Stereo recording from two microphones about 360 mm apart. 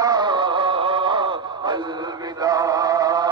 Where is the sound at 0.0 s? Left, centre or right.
Centre.